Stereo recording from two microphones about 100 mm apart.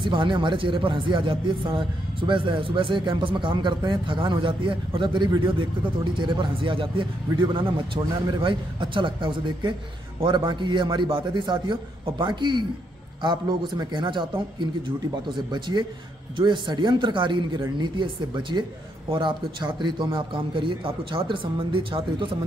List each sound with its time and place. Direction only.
0.0 s a man's voice: 55° right (ahead or behind)